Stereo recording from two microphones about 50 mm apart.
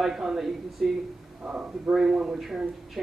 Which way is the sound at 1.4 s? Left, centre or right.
Centre.